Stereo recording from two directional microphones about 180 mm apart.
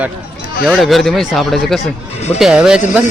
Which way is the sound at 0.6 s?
Centre (ahead or behind).